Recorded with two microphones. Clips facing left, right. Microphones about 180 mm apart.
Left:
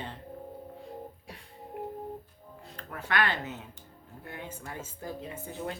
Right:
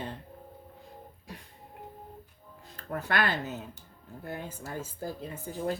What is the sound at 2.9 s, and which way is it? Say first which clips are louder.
Speech: right 1 dB; 40° right (ahead or behind).